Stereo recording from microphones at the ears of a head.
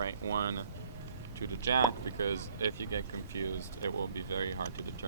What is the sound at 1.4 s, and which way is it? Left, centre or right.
Speech, right.